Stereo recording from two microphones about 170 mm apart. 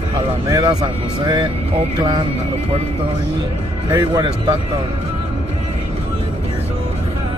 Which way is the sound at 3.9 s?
20° right (ahead or behind).